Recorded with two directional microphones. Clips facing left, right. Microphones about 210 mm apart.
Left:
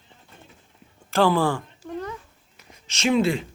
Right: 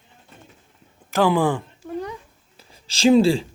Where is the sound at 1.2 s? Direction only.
15° right (ahead or behind).